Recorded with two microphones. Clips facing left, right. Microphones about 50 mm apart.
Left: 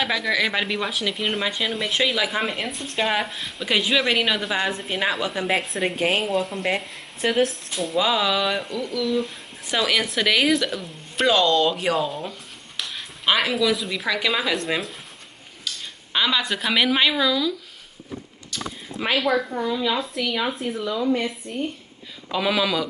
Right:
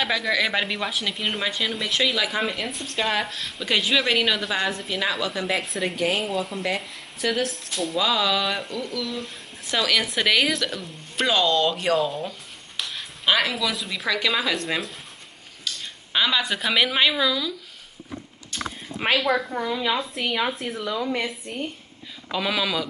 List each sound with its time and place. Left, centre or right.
0.0 s a woman's voice: centre
4.8 s a woman's voice: left
5.6 s a woman's voice: centre
5.9 s a woman's voice: left
6.2 s a woman's voice: centre
7.2 s a woman's voice: left
7.7 s a woman's voice: centre
18.5 s speech: right
19.1 s a woman's voice: centre
19.5 s a woman's voice: centre
22.3 s a woman's voice: centre